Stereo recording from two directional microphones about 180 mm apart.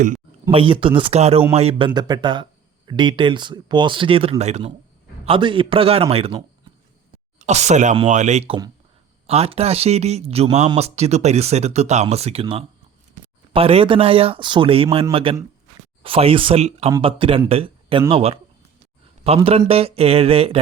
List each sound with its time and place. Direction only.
0.5 s speech: 30° right (ahead or behind)